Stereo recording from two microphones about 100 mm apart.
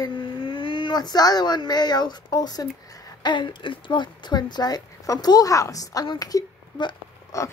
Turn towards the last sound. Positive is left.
turn(degrees=35)  # may be behind; listen again after turning